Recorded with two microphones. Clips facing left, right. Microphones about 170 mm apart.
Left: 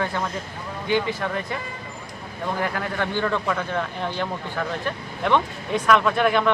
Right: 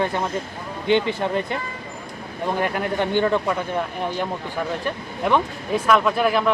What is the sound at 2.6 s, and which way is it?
Speech, 20° right (ahead or behind).